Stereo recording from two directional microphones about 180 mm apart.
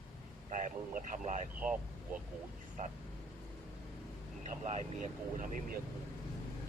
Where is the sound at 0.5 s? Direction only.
45° right (ahead or behind).